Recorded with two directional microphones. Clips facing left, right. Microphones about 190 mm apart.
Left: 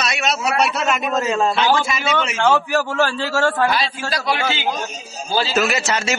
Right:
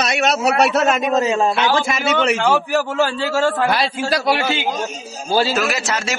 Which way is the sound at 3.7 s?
60° right (ahead or behind).